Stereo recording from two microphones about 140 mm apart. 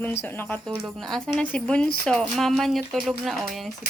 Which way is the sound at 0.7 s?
5° left (ahead or behind).